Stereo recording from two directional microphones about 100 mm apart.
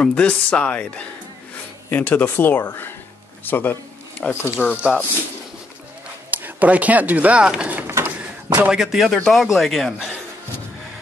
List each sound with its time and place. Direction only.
0.0 s speech: 10° left (ahead or behind)
6.3 s speech: 15° right (ahead or behind)
7.8 s a sound: 25° right (ahead or behind)
8.2 s speech: 10° right (ahead or behind)